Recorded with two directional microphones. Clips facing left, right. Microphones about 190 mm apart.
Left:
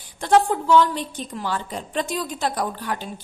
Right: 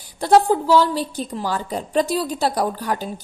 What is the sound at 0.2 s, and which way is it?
A woman's voice, 35° right (ahead or behind).